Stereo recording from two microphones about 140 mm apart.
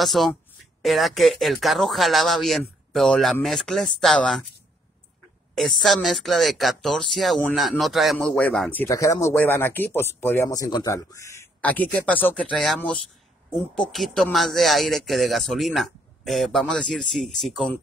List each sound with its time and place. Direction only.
0.0 s speech: centre (ahead or behind)
5.5 s speech: centre (ahead or behind)
8.8 s speech: 20° left (ahead or behind)
11.6 s speech: 10° left (ahead or behind)